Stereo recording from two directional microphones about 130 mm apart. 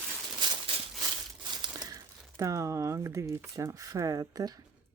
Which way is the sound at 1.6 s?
30° right (ahead or behind).